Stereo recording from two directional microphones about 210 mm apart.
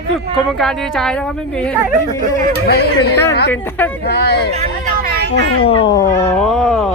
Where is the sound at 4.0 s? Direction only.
50° left (ahead or behind).